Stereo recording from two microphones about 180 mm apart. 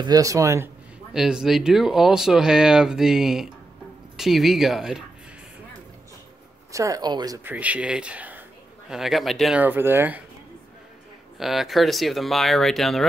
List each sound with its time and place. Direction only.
0.0 s speech: 20° right (ahead or behind)
1.1 s speech: 5° right (ahead or behind)
6.7 s speech: 20° right (ahead or behind)
7.4 s a man's voice: 10° right (ahead or behind)
11.3 s speech: centre (ahead or behind)